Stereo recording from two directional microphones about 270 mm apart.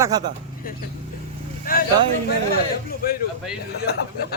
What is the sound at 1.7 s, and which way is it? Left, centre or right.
Speech, left.